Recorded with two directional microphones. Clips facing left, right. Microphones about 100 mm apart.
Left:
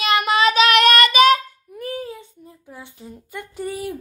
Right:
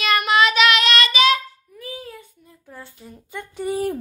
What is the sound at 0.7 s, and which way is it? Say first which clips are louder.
Child singing: left 5 dB; 50° left (ahead or behind).